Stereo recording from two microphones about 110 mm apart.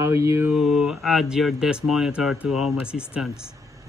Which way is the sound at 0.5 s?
5° right (ahead or behind).